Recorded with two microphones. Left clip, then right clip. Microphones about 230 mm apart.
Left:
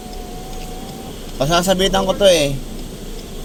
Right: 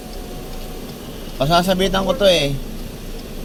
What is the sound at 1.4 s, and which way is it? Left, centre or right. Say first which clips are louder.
A man's voice: left 1 dB; left.